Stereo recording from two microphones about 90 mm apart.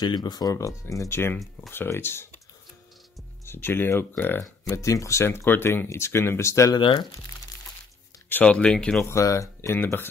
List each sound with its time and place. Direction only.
0.0 s speech: 50° left (ahead or behind); by 2.2 s 25° left (ahead or behind)
3.4 s speech: 25° left (ahead or behind)
4.6 s speech: 35° left (ahead or behind)
6.7 s speech: 60° left (ahead or behind)
8.3 s speech: 15° left (ahead or behind)
9.0 s speech: 35° left (ahead or behind)